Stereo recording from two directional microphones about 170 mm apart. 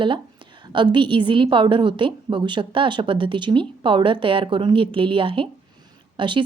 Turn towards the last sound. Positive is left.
turn(degrees=-30)  # may be behind; listen again after turning